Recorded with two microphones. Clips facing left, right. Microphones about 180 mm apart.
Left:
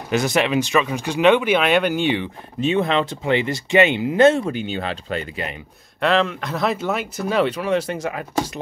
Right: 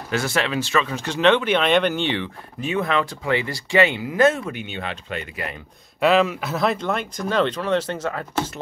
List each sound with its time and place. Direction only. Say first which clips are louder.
0.1 s speech: left 4 dB; 20° left (ahead or behind)
2.6 s speech: left 3 dB; 25° left (ahead or behind)
5.9 s speech: right 1 dB; 5° right (ahead or behind); by 8.5 s 10° left (ahead or behind)